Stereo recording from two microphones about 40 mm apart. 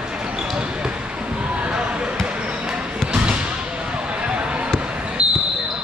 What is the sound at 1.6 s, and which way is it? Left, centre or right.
Basketball bounce, right.